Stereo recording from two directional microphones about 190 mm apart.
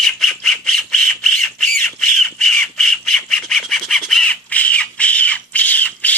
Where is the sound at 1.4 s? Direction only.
Centre (ahead or behind).